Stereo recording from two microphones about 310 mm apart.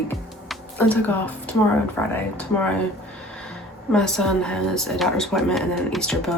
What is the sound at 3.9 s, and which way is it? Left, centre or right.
Speech, centre.